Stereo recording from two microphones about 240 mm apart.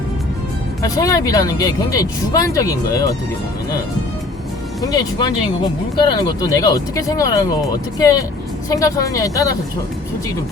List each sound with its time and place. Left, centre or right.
0.8 s speech: centre
4.8 s speech: centre